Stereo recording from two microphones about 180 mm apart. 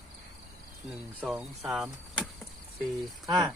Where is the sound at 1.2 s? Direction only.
Centre (ahead or behind).